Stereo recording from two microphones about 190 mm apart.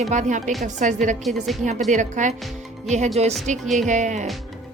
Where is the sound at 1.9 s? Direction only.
40° right (ahead or behind).